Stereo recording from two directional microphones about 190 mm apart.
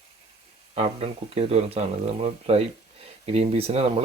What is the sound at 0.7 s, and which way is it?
Speech, 30° right (ahead or behind).